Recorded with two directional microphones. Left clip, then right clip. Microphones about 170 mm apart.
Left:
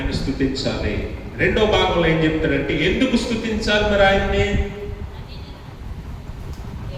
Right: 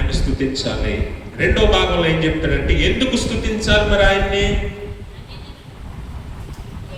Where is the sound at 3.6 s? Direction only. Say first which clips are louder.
Right 1 dB; 20° right (ahead or behind).